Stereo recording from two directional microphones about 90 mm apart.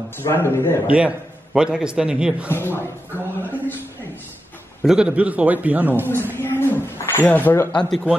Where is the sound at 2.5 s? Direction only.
25° left (ahead or behind).